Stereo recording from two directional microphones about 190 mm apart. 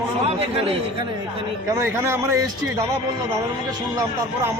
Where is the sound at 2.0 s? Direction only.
10° right (ahead or behind).